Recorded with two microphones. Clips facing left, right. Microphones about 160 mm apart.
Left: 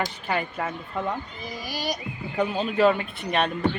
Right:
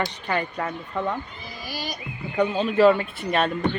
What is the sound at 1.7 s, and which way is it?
Speech, 40° left (ahead or behind).